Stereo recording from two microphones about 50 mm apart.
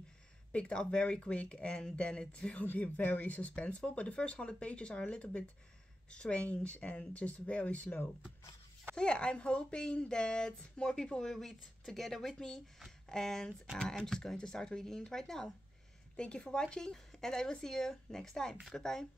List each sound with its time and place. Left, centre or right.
0.5 s speech: left
2.6 s speech: left
8.9 s speech: centre
16.2 s speech: left